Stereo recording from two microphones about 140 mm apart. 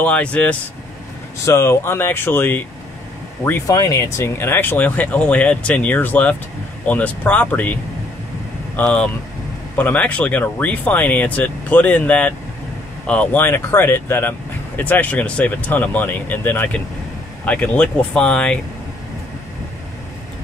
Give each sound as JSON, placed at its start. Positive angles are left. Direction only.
{"t": 0.0, "sound": "speech", "side_deg": 10}